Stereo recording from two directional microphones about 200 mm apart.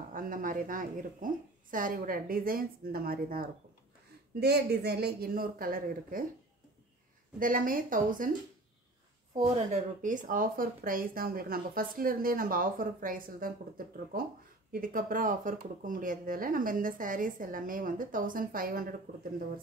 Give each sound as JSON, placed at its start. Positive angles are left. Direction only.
{"t": 0.1, "sound": "speech", "side_deg": -45}
{"t": 7.3, "sound": "speech", "side_deg": -45}
{"t": 9.5, "sound": "speech", "side_deg": -35}